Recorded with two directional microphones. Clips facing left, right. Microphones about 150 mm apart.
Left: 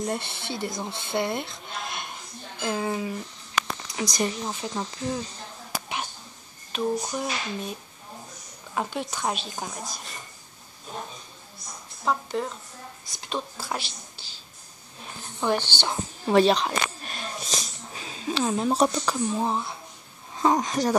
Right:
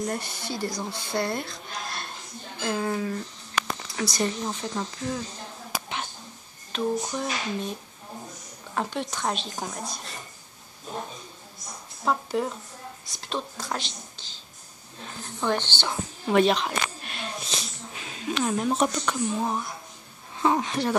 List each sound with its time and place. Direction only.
0.0 s speech: 25° left (ahead or behind)
6.7 s speech: 10° left (ahead or behind)
8.7 s speech: 5° left (ahead or behind)
12.0 s speech: 5° right (ahead or behind)
15.4 s speech: 10° left (ahead or behind)
16.3 s a sound: 35° left (ahead or behind)
20.4 s speech: 40° left (ahead or behind)